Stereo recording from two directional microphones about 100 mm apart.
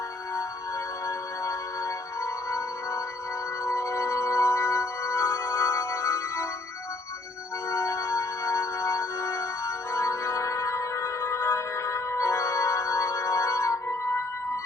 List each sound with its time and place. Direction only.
1.0 s music: 30° left (ahead or behind)
7.7 s music: 30° left (ahead or behind)